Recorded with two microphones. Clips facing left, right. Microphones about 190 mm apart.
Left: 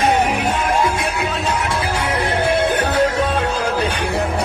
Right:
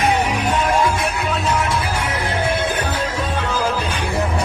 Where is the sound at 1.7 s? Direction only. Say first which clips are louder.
Left 1 dB; 65° left (ahead or behind).